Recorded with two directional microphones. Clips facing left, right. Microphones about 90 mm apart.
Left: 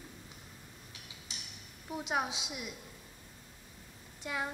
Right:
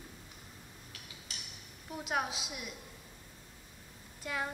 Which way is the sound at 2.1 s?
15° left (ahead or behind).